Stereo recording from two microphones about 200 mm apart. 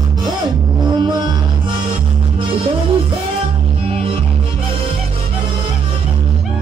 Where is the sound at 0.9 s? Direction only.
20° right (ahead or behind).